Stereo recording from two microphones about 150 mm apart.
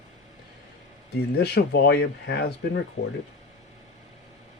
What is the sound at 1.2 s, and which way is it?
Speech, 90° left.